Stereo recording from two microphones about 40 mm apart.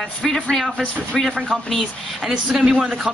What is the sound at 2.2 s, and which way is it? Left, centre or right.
Speech, centre.